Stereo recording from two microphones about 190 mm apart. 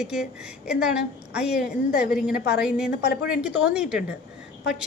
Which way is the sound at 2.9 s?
60° left (ahead or behind).